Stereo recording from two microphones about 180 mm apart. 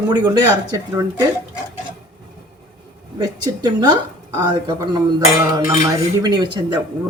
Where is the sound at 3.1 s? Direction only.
20° right (ahead or behind).